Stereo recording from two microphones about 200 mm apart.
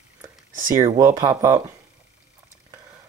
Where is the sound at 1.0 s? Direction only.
15° right (ahead or behind).